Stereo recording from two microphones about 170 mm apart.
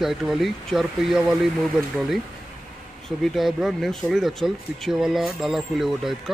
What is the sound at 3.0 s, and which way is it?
Speech, centre (ahead or behind).